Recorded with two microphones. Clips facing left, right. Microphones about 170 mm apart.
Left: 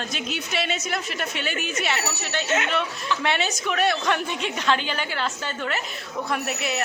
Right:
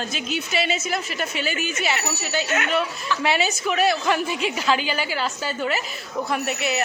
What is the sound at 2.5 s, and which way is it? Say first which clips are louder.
Speech: left 2 dB; 25° left (ahead or behind).